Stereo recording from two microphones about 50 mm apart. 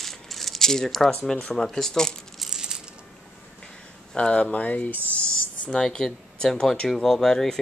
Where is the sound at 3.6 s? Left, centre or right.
Centre.